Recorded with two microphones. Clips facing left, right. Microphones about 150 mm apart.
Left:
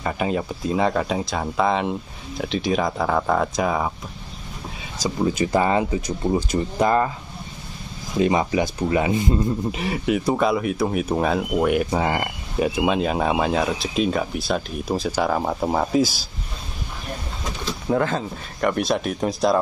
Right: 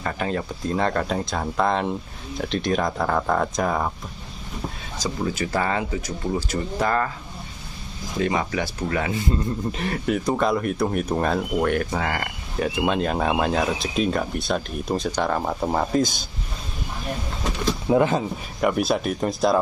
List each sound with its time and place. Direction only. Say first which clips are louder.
0.0 s speech: left 3 dB; 10° left (ahead or behind)
5.2 s speech: left 5 dB; 20° left (ahead or behind)
8.2 s speech: left 4 dB; 20° left (ahead or behind)
9.8 s speech: left 2 dB; 5° left (ahead or behind)
17.8 s speech: right 2 dB; 15° right (ahead or behind)
18.6 s speech: even; 5° right (ahead or behind)